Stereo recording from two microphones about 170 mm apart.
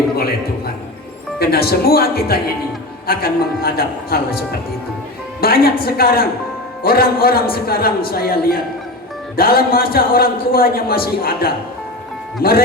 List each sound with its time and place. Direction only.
0.2 s a man's voice: 65° left (ahead or behind)